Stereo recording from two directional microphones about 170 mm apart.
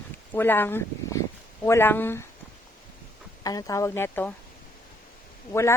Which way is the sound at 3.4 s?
20° left (ahead or behind).